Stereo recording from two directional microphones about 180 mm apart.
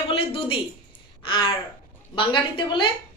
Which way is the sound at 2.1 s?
25° left (ahead or behind).